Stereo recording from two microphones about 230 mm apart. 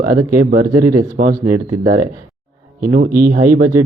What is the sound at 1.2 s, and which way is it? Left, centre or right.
Speech, right.